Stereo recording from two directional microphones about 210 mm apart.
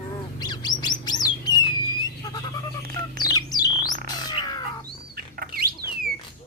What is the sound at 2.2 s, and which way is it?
Music, 20° left (ahead or behind).